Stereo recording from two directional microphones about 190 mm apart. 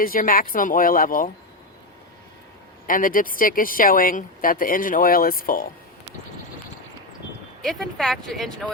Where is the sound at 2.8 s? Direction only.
45° left (ahead or behind).